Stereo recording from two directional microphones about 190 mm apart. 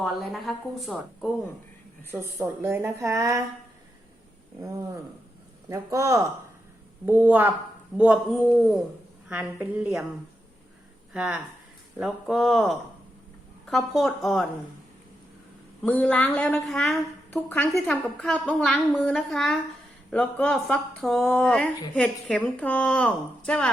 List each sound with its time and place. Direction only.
0.0 s a woman's voice: centre (ahead or behind)
2.4 s a woman's voice: 10° right (ahead or behind)
5.6 s a woman's voice: 15° right (ahead or behind)
9.3 s a woman's voice: 5° right (ahead or behind)
11.1 s a woman's voice: 5° right (ahead or behind)
15.8 s a woman's voice: 5° left (ahead or behind)